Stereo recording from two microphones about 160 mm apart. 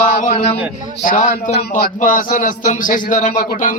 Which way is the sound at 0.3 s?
40° left (ahead or behind).